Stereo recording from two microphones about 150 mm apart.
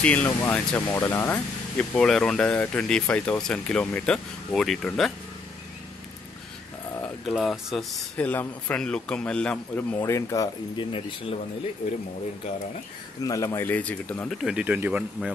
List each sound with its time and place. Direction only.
0.0 s speech: 10° left (ahead or behind)
7.2 s speech: centre (ahead or behind)
10.0 s speech: 20° left (ahead or behind)
10.9 s speech: 35° left (ahead or behind)
13.2 s speech: 25° left (ahead or behind)
14.3 s speech: 5° right (ahead or behind)